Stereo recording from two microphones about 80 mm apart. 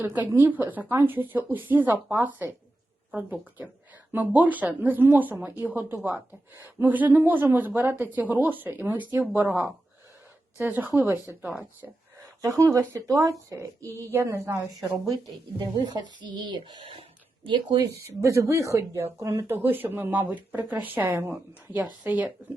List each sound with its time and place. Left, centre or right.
0.0 s speech: right
10.6 s speech: right
12.4 s speech: right
15.5 s speech: right
17.4 s speech: right
18.0 s speech: right
19.5 s speech: right